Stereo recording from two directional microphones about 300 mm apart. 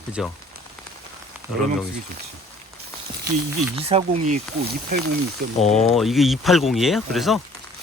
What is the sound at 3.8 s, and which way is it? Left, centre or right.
Speech, centre.